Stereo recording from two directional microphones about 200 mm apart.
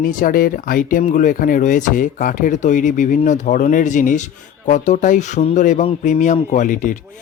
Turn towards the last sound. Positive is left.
turn(degrees=40)  # may be behind; listen again after turning